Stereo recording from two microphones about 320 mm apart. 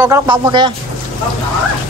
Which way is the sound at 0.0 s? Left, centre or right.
Centre.